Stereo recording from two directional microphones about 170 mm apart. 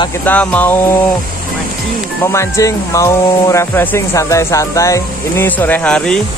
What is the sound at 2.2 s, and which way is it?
Speech, 15° left (ahead or behind).